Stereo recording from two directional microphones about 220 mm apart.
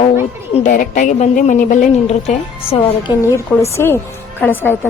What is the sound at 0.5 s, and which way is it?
A woman's voice, 35° left (ahead or behind).